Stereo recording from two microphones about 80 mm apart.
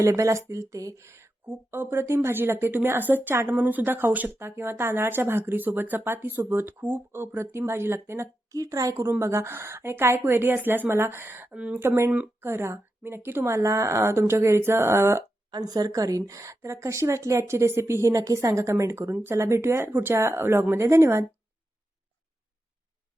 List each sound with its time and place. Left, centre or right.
0.0 s speech: right
9.0 s speech: right
11.5 s speech: centre
11.8 s speech: right
15.4 s speech: right